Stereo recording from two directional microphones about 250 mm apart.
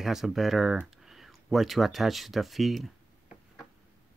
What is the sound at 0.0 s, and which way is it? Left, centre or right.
Speech, centre.